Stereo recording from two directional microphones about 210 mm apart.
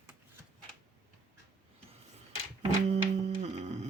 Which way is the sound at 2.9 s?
30° right (ahead or behind).